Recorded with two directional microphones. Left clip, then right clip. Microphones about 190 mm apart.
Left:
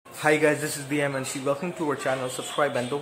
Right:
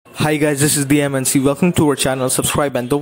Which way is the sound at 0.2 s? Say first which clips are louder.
Right 5 dB; 50° right (ahead or behind).